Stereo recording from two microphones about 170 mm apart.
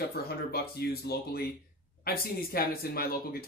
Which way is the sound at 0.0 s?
65° left (ahead or behind).